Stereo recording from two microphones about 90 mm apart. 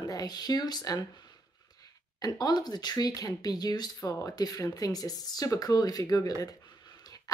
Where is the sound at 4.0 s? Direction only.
35° left (ahead or behind).